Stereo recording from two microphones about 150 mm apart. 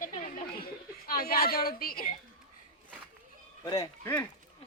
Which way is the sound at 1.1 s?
80° left.